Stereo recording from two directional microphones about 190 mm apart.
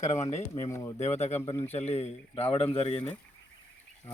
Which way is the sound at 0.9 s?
35° left (ahead or behind).